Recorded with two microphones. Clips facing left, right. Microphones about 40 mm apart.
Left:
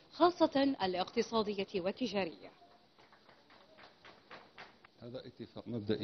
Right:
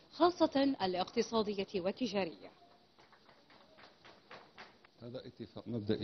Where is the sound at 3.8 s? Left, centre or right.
Centre.